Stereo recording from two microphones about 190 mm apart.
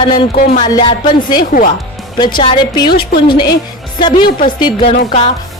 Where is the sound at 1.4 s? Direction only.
45° left (ahead or behind).